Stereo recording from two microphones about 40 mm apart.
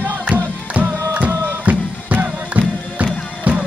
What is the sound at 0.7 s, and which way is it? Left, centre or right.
Music, right.